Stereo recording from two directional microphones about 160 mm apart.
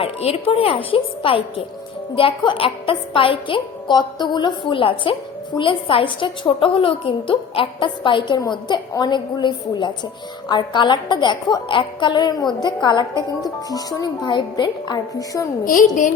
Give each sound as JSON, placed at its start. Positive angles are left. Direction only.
{"t": 0.0, "sound": "a woman's voice", "side_deg": 40}
{"t": 15.6, "sound": "a woman's voice", "side_deg": 55}